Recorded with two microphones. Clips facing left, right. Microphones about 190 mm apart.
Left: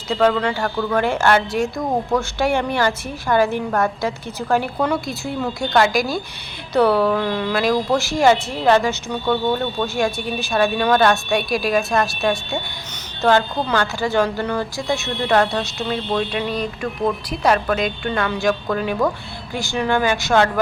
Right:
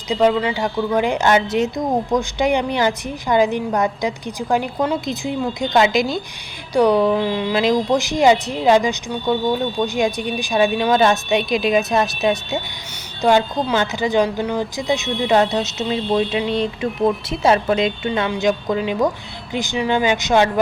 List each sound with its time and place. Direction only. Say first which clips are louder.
0.1 s a woman's voice: right 1 dB; 5° right (ahead or behind)
0.5 s a woman's voice: right 1 dB; 15° right (ahead or behind)
13.2 s a woman's voice: right 1 dB; 15° right (ahead or behind)
15.0 s speech: right 2 dB; centre (ahead or behind)
15.3 s a woman's voice: right 1 dB; 20° right (ahead or behind)